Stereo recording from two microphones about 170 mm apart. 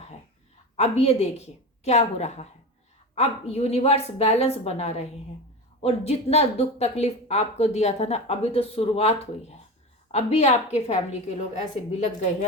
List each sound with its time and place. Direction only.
0.8 s a woman's voice: 40° left (ahead or behind)